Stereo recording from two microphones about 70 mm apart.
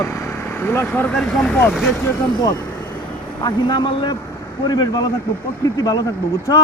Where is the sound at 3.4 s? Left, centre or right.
Left.